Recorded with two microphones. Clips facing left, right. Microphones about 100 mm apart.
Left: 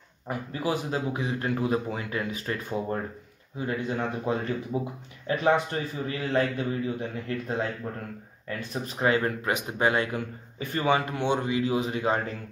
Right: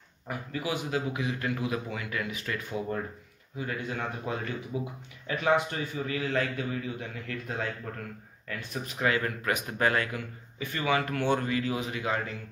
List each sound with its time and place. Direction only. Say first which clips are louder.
0.5 s speech: left 3 dB; 35° left (ahead or behind); by 10.0 s 20° left (ahead or behind)
10.1 s speech: left 5 dB; 35° left (ahead or behind)